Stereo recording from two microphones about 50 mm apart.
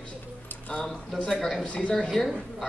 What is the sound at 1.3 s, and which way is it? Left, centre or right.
Speech, centre.